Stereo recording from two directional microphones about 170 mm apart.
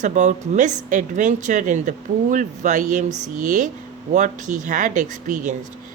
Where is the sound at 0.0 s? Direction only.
45° right (ahead or behind).